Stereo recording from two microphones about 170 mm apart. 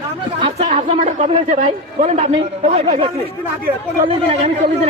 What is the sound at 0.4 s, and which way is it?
A woman's voice, 40° right (ahead or behind).